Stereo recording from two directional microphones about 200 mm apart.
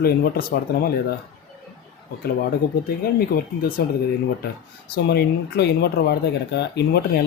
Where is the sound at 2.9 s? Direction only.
50° left (ahead or behind).